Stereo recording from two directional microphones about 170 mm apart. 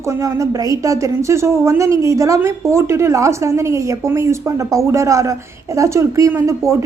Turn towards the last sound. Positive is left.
turn(degrees=-15)  # may be behind; listen again after turning